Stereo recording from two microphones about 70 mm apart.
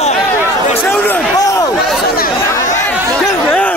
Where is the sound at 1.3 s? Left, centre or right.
Left.